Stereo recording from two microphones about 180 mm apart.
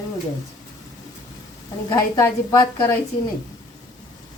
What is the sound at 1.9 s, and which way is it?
A woman's voice, 15° left (ahead or behind).